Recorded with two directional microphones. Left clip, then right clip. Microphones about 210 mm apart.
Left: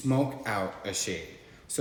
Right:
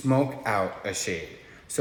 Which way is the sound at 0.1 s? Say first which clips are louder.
Right 5 dB; 15° right (ahead or behind).